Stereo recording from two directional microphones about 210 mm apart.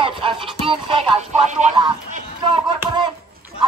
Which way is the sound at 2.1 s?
25° right (ahead or behind).